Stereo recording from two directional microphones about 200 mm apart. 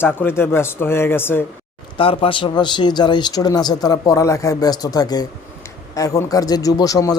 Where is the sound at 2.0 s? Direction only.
25° left (ahead or behind).